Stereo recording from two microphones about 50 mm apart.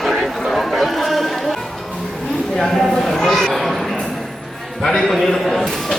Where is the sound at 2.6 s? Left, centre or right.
Centre.